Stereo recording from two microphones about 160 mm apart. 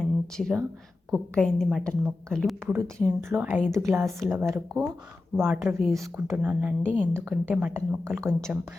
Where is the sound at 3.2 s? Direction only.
10° right (ahead or behind).